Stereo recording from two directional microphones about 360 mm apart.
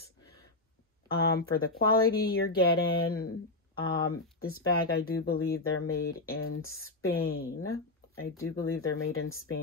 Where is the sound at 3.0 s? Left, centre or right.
Left.